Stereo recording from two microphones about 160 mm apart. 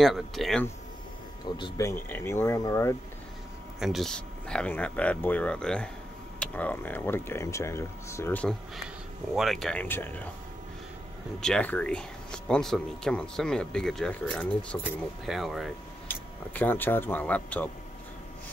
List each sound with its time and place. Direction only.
0.0 s speech: centre (ahead or behind)
1.6 s speech: 20° left (ahead or behind)
3.8 s speech: centre (ahead or behind)
11.4 s speech: 5° left (ahead or behind)
14.8 s speech: 5° right (ahead or behind)
16.5 s speech: 10° left (ahead or behind)